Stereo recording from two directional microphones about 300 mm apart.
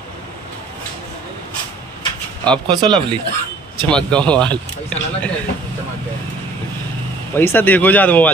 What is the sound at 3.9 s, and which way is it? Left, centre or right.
Speech, centre.